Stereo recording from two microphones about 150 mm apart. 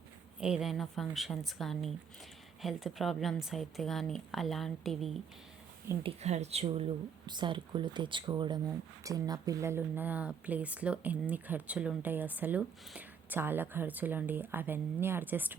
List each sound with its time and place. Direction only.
0.3 s a woman's voice: 5° right (ahead or behind)
6.0 s speech: 45° right (ahead or behind)
7.3 s speech: 30° right (ahead or behind); by 15.5 s 10° right (ahead or behind)